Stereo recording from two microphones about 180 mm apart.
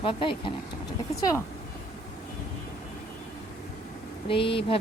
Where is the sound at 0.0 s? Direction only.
30° left (ahead or behind).